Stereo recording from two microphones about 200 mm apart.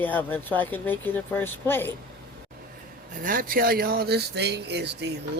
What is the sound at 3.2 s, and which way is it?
Speech, 45° right (ahead or behind).